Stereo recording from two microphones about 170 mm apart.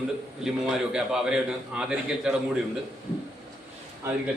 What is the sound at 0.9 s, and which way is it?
A man's voice, 5° right (ahead or behind).